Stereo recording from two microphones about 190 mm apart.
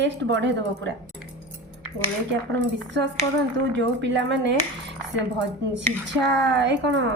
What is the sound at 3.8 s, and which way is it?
Speech, 70° right (ahead or behind).